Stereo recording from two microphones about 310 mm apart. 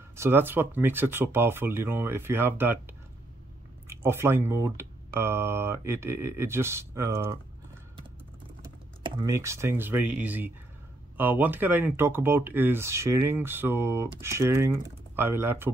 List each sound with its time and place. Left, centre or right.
0.1 s speech: centre
9.0 s speech: centre